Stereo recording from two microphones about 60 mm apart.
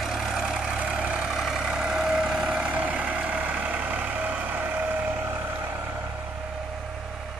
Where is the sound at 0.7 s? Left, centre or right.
Centre.